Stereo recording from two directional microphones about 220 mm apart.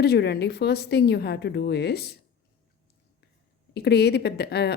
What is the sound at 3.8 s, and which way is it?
Speech, 50° left (ahead or behind).